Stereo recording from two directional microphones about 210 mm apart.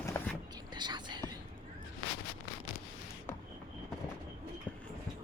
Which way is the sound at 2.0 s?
70° left (ahead or behind).